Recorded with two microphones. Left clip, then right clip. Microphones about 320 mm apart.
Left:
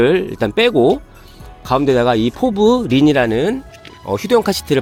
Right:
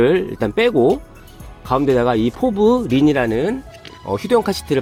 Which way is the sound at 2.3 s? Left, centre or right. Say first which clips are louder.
Even; left.